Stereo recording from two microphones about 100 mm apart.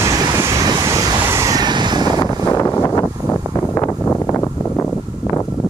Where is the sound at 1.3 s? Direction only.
35° right (ahead or behind).